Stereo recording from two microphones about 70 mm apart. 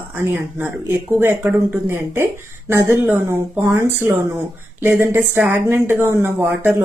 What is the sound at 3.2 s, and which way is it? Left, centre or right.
Speech, right.